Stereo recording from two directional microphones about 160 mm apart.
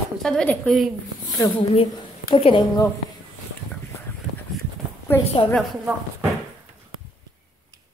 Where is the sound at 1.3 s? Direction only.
20° left (ahead or behind).